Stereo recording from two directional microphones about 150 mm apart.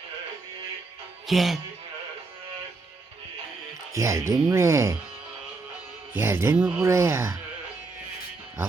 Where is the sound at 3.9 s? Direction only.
20° right (ahead or behind).